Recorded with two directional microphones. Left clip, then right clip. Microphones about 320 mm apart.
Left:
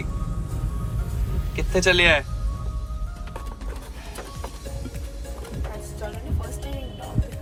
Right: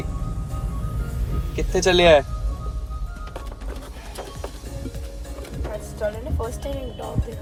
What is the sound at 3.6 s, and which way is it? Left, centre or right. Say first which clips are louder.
Music: right 2 dB; centre.